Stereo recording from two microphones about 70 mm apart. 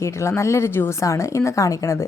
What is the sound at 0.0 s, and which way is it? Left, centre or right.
A woman's voice, left.